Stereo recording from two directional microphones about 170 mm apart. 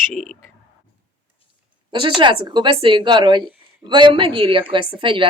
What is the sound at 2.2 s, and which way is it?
A woman's voice, 30° right (ahead or behind).